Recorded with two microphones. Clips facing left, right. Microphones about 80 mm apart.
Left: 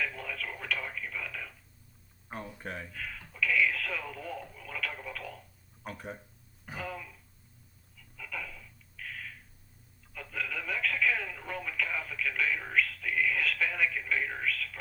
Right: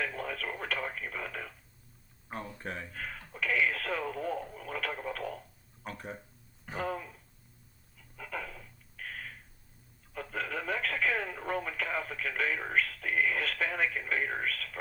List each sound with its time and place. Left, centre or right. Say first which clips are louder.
0.0 s radio: right 1 dB; right
2.3 s speech: right 1 dB; centre
2.9 s a sound: right 1 dB; right
4.9 s telephone: right 5 dB; right
5.8 s speech: even; centre
6.7 s a sound: right 5 dB; right
7.9 s dog: right 2 dB; right
10.1 s telephone: right 2 dB; right